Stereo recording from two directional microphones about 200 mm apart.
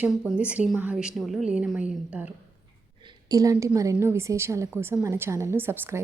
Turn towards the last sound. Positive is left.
turn(degrees=-10)  # may be behind; listen again after turning